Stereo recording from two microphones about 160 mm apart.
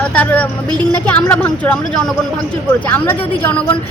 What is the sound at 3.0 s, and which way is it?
Speech, 10° left (ahead or behind).